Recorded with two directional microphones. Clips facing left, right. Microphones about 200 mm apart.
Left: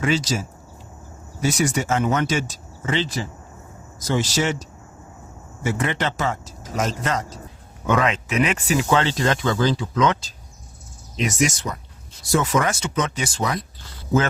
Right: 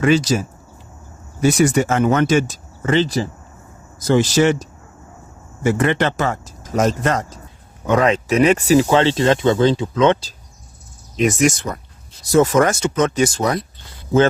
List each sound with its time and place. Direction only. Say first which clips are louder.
0.0 s speech: right 7 dB; 55° right (ahead or behind)
8.0 s speech: right 7 dB; 35° right (ahead or behind)
11.3 s speech: right 5 dB; 55° right (ahead or behind)
12.2 s speech: right 7 dB; 45° right (ahead or behind)